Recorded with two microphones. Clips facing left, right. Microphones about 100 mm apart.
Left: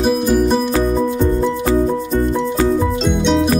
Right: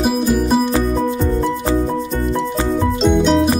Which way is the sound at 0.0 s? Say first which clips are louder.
Left 2 dB; 5° right (ahead or behind).